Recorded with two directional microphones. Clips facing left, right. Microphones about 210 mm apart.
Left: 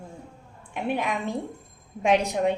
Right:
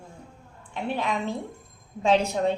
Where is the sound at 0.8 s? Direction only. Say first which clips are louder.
Even; 15° left (ahead or behind).